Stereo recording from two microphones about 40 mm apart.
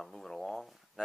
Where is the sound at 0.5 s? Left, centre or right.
Centre.